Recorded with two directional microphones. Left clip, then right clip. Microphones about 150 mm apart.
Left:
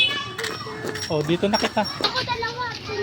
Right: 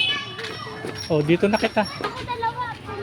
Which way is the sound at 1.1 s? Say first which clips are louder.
Right 3 dB; 55° right (ahead or behind).